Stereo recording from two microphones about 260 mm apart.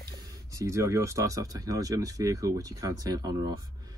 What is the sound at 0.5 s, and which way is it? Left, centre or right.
Speech, centre.